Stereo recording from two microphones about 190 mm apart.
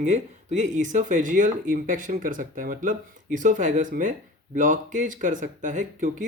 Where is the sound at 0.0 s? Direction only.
40° right (ahead or behind).